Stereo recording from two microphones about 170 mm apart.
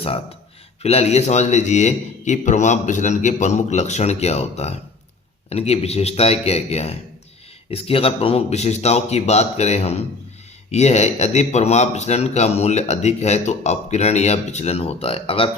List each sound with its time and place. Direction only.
0.8 s a man's voice: 35° left (ahead or behind)